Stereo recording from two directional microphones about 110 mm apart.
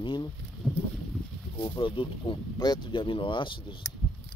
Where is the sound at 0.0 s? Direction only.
45° left (ahead or behind).